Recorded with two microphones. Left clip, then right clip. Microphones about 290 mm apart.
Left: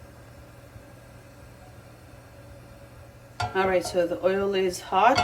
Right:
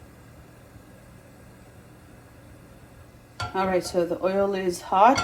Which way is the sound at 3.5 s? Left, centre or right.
Right.